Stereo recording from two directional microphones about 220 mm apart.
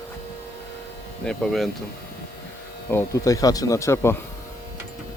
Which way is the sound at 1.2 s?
Centre (ahead or behind).